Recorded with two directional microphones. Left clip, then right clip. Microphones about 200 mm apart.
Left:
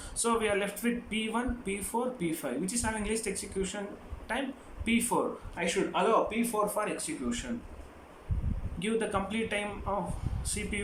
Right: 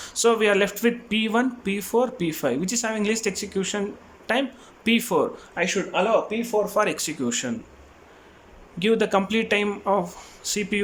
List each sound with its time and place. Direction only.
0.0 s speech: 50° right (ahead or behind)
8.8 s speech: 50° right (ahead or behind)